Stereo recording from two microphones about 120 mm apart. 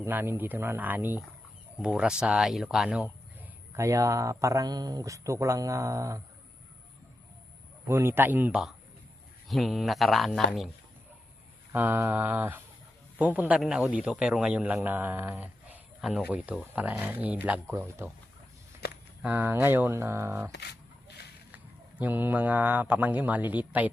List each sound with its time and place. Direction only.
0.0 s speech: 20° right (ahead or behind)
3.7 s speech: 25° right (ahead or behind)
7.9 s speech: 20° right (ahead or behind)
9.5 s speech: centre (ahead or behind)
11.7 s a man's voice: 15° right (ahead or behind)
16.0 s speech: 5° right (ahead or behind)
19.2 s speech: 15° right (ahead or behind)
21.5 s speech: 15° right (ahead or behind)